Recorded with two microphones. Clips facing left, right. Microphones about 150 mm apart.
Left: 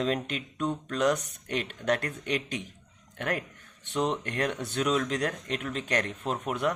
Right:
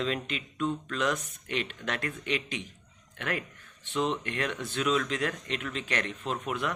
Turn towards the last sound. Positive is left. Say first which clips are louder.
# left 3 dB
turn(degrees=40)  # may be behind; listen again after turning